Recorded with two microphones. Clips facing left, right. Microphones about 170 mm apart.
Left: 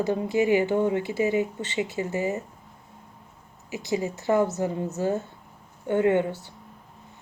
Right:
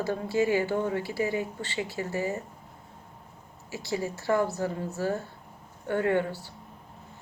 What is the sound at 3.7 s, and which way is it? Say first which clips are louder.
Speech: left 4 dB; 20° left (ahead or behind).